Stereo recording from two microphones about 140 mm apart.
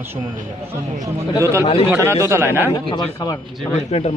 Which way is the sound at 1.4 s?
20° right (ahead or behind).